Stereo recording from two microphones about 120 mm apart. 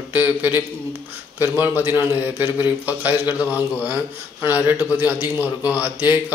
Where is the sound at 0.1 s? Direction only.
15° right (ahead or behind).